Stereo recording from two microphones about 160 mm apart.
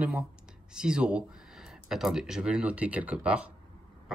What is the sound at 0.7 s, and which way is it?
Speech, 5° right (ahead or behind).